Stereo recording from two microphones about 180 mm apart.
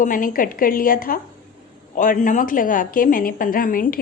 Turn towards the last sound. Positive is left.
turn(degrees=50)  # may be behind; listen again after turning